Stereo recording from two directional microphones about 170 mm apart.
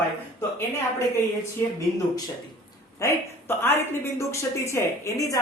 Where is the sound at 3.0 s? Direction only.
20° left (ahead or behind).